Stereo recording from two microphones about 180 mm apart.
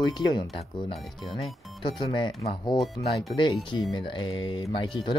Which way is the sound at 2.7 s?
Centre (ahead or behind).